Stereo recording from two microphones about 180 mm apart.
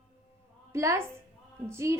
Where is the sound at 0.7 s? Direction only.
15° right (ahead or behind).